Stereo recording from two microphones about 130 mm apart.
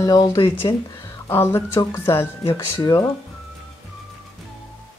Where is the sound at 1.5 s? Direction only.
20° left (ahead or behind).